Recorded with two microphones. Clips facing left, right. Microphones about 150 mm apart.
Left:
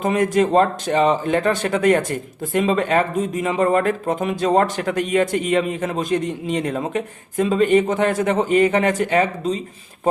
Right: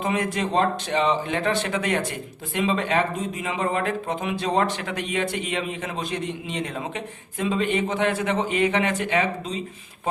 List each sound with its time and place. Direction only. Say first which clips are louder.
0.0 s speech: left 7 dB; 45° left (ahead or behind)